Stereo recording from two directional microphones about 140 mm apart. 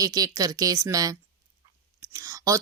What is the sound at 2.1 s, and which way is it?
Whispering, 25° right (ahead or behind).